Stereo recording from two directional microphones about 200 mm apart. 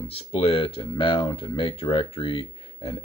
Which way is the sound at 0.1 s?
30° left (ahead or behind).